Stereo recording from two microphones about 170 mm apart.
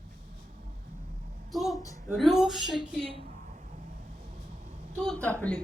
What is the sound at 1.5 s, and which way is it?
Speech, centre (ahead or behind).